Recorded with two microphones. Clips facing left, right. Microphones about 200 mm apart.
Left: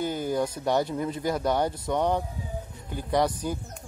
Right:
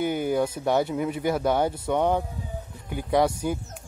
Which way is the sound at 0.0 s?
60° right (ahead or behind).